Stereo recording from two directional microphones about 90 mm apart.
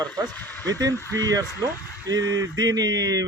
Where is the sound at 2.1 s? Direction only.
45° right (ahead or behind).